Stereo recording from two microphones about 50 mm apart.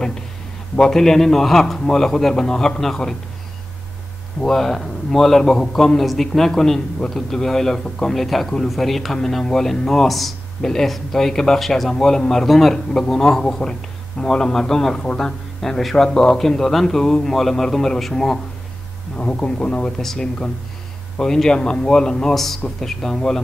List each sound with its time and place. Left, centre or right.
0.7 s a man's voice: centre
4.4 s a man's voice: centre
19.1 s speech: left
20.0 s a man's voice: centre